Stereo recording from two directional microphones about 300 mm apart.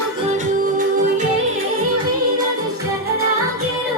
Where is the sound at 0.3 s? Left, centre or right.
Right.